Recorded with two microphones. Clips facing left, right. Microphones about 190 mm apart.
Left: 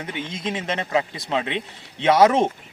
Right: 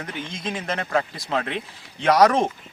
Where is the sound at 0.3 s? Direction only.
25° left (ahead or behind).